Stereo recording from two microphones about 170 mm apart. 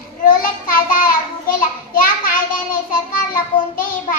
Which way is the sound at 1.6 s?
55° left (ahead or behind).